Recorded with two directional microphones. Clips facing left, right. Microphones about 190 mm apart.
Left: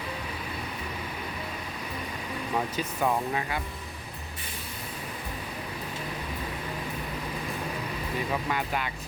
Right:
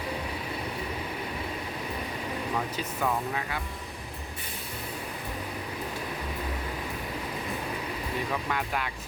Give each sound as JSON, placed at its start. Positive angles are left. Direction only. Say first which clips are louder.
{"t": 3.0, "sound": "speech", "louder": "left 2 dB", "side_deg": 20}
{"t": 8.4, "sound": "speech", "louder": "left 1 dB", "side_deg": 0}